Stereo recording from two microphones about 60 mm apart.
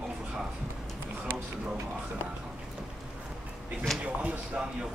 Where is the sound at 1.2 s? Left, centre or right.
Right.